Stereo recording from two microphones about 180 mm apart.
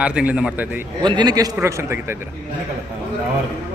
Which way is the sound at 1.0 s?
25° right (ahead or behind).